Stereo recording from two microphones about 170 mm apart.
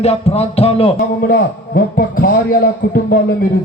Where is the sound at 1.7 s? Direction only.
60° left (ahead or behind).